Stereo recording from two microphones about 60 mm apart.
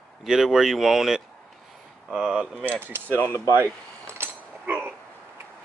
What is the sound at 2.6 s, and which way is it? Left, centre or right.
Speech, right.